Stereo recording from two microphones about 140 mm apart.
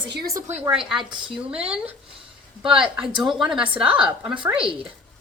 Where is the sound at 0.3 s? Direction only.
20° right (ahead or behind).